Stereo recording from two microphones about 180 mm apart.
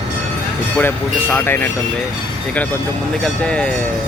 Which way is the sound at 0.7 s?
10° left (ahead or behind).